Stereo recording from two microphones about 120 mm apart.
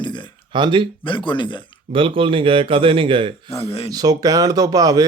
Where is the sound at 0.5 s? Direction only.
40° right (ahead or behind).